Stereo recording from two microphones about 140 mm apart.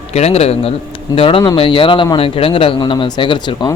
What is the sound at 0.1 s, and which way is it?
A man's voice, 50° left (ahead or behind).